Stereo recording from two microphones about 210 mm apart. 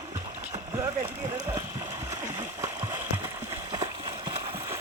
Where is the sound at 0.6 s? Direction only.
10° right (ahead or behind).